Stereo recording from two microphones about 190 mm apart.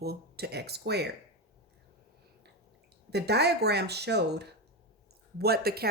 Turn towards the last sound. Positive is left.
turn(degrees=-55)  # may be behind; listen again after turning